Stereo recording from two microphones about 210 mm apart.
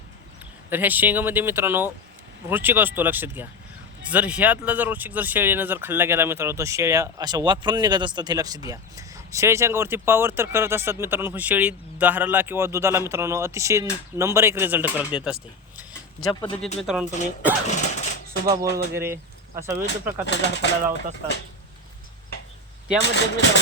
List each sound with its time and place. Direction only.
0.7 s speech: 10° right (ahead or behind)
16.3 s speech: 20° left (ahead or behind)
16.8 s speech: 5° right (ahead or behind)
17.7 s a sound: 35° left (ahead or behind)
18.5 s speech: 15° right (ahead or behind)
19.8 s speech: 55° left (ahead or behind)
23.0 s speech: 55° left (ahead or behind)